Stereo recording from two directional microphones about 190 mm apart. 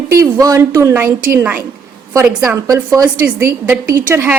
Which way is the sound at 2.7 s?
20° right (ahead or behind).